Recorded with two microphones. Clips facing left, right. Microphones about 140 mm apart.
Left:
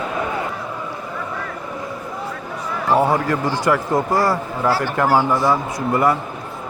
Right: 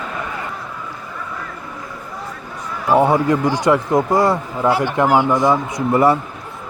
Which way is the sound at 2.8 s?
20° right (ahead or behind).